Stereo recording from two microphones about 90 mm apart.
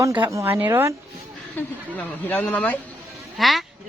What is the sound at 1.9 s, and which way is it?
Speech, 20° left (ahead or behind).